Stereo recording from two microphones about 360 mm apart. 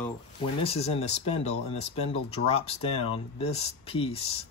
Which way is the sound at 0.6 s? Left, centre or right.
Centre.